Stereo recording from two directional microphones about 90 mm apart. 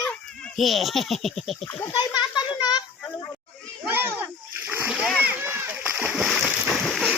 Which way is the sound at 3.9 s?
25° right (ahead or behind).